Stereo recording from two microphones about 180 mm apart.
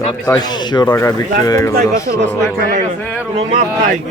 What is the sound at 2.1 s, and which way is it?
Speech, 50° right (ahead or behind).